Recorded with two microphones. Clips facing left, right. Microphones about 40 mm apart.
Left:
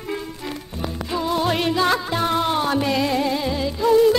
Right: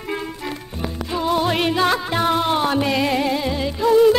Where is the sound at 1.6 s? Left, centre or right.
Right.